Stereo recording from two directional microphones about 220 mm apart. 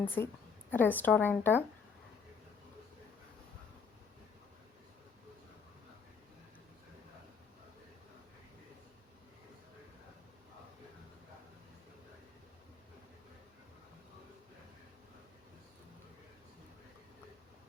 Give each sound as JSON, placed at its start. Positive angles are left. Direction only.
{"t": 0.0, "sound": "a woman's voice", "side_deg": 10}